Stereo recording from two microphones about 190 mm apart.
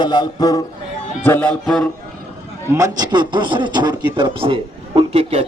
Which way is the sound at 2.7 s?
20° right (ahead or behind).